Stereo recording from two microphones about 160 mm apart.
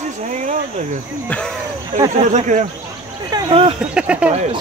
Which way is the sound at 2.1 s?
50° right (ahead or behind).